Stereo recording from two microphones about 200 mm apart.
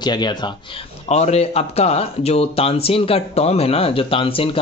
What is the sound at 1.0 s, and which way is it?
Speech, 30° left (ahead or behind).